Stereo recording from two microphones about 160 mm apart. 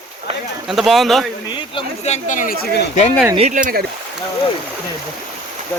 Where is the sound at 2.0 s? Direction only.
50° left (ahead or behind).